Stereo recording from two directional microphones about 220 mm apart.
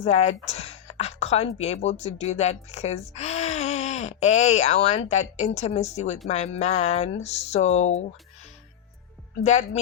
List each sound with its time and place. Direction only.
0.0 s a woman's voice: 30° left (ahead or behind)
9.4 s speech: 30° left (ahead or behind)